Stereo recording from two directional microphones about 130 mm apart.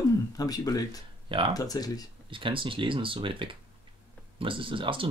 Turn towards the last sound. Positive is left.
turn(degrees=-40)  # may be behind; listen again after turning